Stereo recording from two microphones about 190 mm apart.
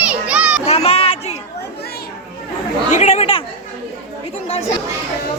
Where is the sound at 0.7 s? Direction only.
35° left (ahead or behind).